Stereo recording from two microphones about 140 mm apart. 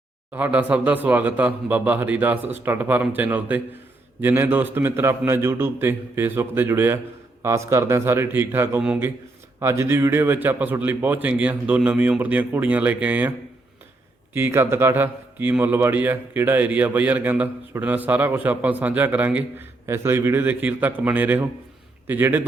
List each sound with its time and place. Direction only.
0.3 s a man's voice: 10° right (ahead or behind)
8.8 s a man's voice: 5° right (ahead or behind)
9.6 s a man's voice: 20° right (ahead or behind)
14.3 s a man's voice: 15° right (ahead or behind)